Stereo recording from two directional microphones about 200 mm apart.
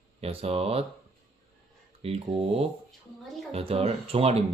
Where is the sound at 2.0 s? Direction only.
30° right (ahead or behind).